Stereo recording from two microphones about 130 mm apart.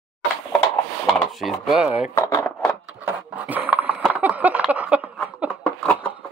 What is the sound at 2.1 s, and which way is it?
Speech, 25° left (ahead or behind).